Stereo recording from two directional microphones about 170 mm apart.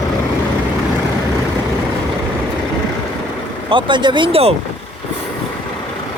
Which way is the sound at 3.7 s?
30° right (ahead or behind).